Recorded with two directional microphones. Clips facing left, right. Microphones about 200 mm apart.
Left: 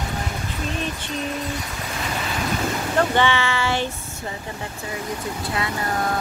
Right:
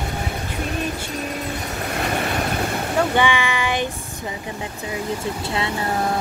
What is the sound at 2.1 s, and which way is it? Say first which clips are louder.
Train: right 4 dB; 60° right (ahead or behind).